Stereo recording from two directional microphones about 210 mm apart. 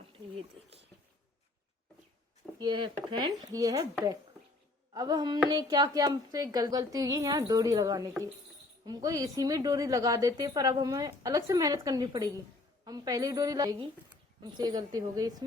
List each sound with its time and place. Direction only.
2.6 s a woman's voice: 20° right (ahead or behind)
4.9 s a woman's voice: 20° right (ahead or behind)